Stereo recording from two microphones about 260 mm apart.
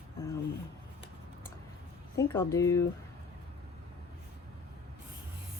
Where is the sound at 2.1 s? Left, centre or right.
Centre.